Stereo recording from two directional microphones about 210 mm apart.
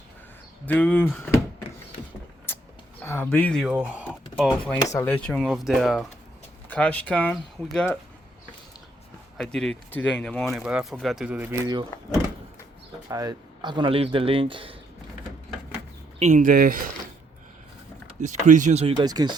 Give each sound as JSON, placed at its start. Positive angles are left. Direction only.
{"t": 0.6, "sound": "speech", "side_deg": 5}
{"t": 3.0, "sound": "speech", "side_deg": 10}
{"t": 9.4, "sound": "speech", "side_deg": 0}
{"t": 13.1, "sound": "speech", "side_deg": -15}
{"t": 16.1, "sound": "speech", "side_deg": -35}
{"t": 18.2, "sound": "speech", "side_deg": -35}